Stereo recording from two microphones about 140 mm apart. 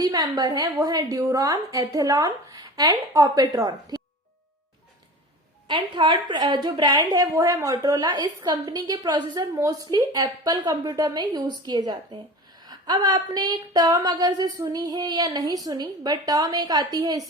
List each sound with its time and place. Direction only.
0.0 s speech: 25° right (ahead or behind)
5.6 s speech: 35° right (ahead or behind)